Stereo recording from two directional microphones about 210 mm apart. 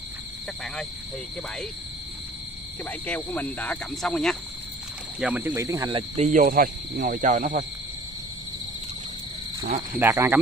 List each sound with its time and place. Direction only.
2.8 s speech: 10° left (ahead or behind)
5.2 s speech: 10° right (ahead or behind); by 7.6 s 35° right (ahead or behind)
9.9 s speech: 10° right (ahead or behind)